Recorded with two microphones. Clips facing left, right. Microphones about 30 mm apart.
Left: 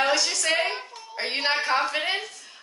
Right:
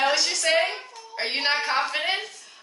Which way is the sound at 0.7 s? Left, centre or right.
Centre.